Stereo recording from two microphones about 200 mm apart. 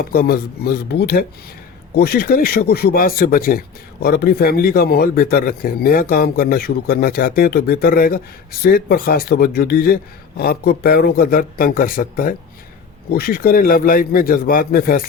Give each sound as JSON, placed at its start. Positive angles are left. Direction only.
{"t": 0.0, "sound": "a man's voice", "side_deg": 50}